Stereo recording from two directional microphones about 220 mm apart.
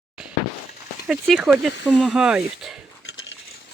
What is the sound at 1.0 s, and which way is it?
Speech, centre (ahead or behind).